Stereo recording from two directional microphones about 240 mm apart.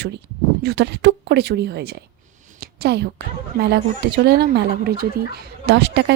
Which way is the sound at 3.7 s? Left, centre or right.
Right.